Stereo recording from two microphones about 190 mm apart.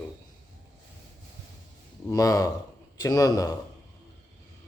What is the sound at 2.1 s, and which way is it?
A man's voice, 20° left (ahead or behind).